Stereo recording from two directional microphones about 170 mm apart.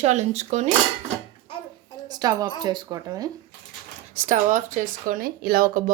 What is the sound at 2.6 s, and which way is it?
Speech, 25° right (ahead or behind).